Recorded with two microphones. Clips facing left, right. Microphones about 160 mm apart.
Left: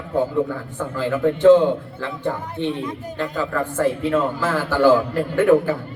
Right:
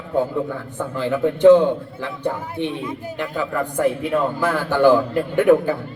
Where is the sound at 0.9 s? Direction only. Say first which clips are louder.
Left 1 dB; 20° right (ahead or behind).